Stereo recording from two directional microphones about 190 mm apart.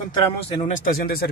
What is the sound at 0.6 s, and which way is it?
Speech, 40° left (ahead or behind).